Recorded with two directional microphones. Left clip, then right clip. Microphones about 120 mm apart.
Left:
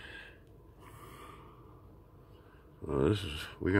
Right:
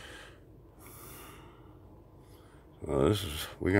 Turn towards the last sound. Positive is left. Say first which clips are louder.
# right 2 dB
turn(degrees=-30)  # may be behind; listen again after turning